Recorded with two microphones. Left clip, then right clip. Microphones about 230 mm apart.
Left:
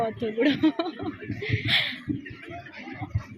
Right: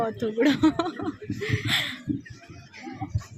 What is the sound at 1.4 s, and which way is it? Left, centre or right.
Speech, right.